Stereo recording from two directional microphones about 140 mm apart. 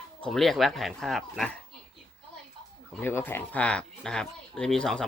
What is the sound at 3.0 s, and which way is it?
Speech, 15° left (ahead or behind).